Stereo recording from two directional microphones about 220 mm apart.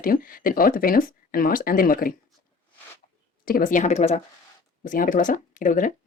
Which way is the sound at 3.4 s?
40° left (ahead or behind).